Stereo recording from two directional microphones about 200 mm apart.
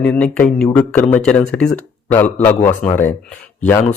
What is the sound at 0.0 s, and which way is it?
Speech, 5° left (ahead or behind).